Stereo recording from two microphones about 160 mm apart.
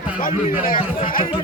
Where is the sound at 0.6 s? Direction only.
60° left (ahead or behind).